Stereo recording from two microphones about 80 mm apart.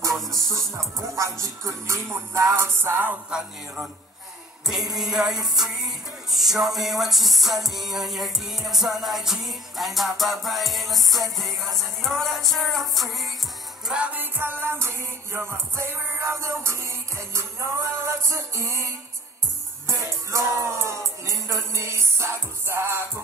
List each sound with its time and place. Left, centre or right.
0.3 s music: right
3.3 s music: centre
4.9 s music: centre
13.8 s music: centre; by 23.0 s right